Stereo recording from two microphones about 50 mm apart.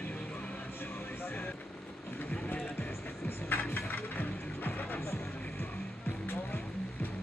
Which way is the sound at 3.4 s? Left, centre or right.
Left.